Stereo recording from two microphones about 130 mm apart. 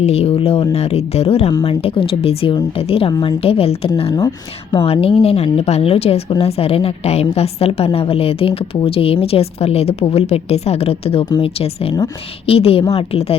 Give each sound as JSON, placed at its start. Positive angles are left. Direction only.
{"t": 0.0, "sound": "speech", "side_deg": 55}